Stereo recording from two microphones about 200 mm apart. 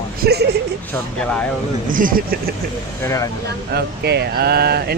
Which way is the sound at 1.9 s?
45° right (ahead or behind).